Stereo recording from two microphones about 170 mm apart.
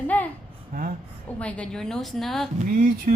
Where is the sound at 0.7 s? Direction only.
60° right (ahead or behind).